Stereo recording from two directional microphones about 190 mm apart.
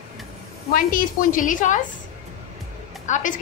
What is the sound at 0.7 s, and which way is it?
A woman's voice, 45° left (ahead or behind).